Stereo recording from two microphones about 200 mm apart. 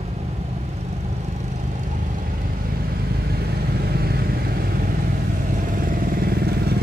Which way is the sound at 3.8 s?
50° right (ahead or behind).